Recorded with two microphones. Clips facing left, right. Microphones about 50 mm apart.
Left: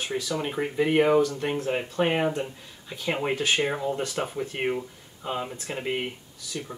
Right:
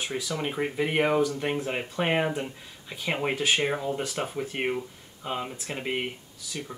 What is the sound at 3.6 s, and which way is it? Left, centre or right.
Speech, centre.